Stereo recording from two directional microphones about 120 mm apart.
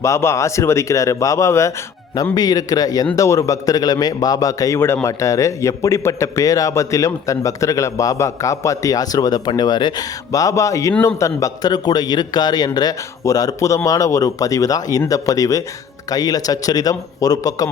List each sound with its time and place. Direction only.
0.0 s a man's voice: 25° left (ahead or behind)